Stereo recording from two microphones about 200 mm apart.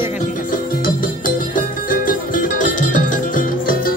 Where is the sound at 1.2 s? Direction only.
45° left (ahead or behind).